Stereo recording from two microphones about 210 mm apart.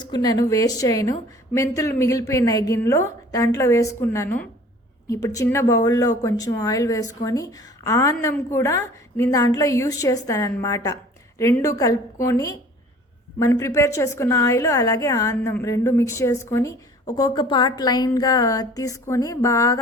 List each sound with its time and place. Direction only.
0.0 s a woman's voice: 20° left (ahead or behind)